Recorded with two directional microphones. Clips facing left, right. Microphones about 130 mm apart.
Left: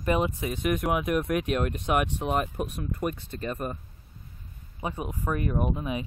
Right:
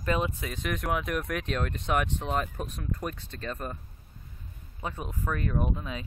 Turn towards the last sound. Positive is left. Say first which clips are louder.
# left 3 dB
turn(degrees=15)  # may be behind; listen again after turning